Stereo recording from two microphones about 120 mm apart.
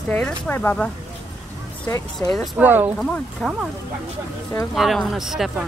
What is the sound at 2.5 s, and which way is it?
Speech, 15° right (ahead or behind).